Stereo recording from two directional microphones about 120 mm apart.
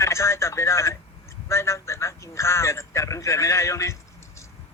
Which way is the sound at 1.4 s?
25° left (ahead or behind).